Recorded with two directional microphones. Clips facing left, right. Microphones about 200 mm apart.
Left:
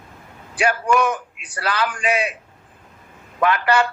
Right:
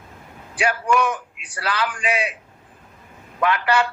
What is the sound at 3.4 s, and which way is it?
Speech, 45° left (ahead or behind).